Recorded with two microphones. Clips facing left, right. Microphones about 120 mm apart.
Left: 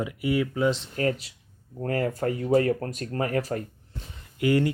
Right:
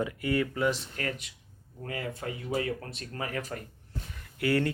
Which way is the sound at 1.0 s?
25° left (ahead or behind).